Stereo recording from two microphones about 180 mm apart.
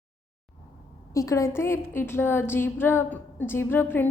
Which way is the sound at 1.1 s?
15° left (ahead or behind).